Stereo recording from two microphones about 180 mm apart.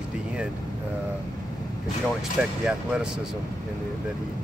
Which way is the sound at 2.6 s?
5° right (ahead or behind).